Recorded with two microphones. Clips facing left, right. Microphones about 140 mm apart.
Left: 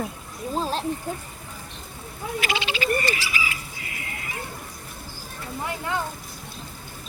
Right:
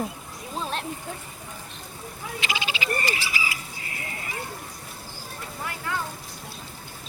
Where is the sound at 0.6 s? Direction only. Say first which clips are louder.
Left 2 dB; 30° left (ahead or behind).